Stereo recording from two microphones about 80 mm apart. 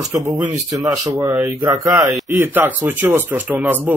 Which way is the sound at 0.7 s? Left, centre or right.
Right.